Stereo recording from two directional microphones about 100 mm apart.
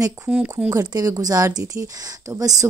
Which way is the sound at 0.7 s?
35° right (ahead or behind).